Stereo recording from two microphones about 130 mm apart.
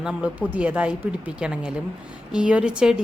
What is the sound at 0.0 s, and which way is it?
A woman's voice, 5° right (ahead or behind).